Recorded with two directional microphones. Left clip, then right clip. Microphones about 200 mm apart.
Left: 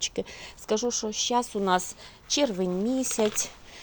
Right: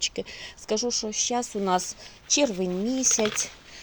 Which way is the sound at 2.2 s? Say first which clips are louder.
Right 2 dB; 15° right (ahead or behind).